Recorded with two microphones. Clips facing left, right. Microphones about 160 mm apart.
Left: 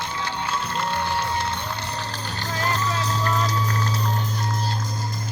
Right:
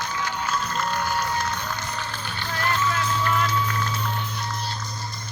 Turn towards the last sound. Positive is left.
turn(degrees=35)  # may be behind; listen again after turning